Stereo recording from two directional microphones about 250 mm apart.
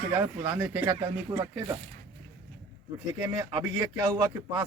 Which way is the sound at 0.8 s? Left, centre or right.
Centre.